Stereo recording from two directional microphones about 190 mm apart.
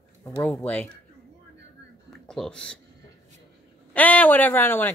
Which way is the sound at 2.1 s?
Centre (ahead or behind).